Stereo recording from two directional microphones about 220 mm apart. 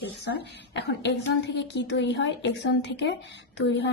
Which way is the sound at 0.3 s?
50° left (ahead or behind).